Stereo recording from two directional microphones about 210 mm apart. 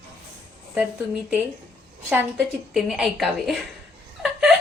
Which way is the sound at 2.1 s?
5° right (ahead or behind).